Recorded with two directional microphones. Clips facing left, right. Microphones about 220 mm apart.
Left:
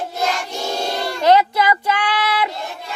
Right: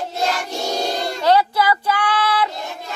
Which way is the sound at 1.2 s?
20° left (ahead or behind).